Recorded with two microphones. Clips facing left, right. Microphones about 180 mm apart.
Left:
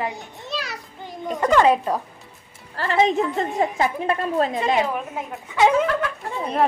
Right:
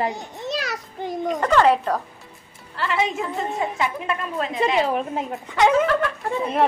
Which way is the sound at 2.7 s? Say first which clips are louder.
Left 4 dB; 40° left (ahead or behind).